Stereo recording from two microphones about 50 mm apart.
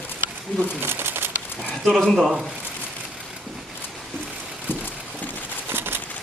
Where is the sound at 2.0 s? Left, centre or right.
Centre.